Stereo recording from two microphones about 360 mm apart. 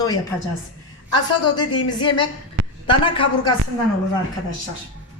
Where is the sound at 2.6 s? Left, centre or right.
Right.